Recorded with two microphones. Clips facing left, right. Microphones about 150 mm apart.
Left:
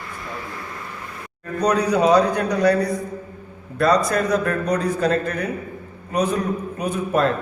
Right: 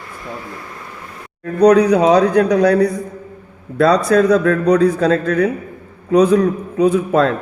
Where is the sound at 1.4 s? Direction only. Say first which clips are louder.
Right 10 dB; 75° right (ahead or behind).